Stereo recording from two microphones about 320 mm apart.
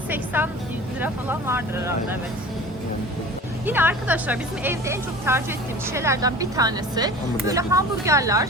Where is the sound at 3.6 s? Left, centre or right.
Centre.